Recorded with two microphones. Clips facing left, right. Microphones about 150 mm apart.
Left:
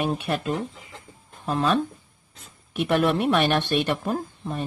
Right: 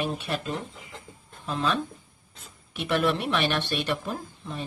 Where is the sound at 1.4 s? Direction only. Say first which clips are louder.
Left 5 dB; 50° left (ahead or behind).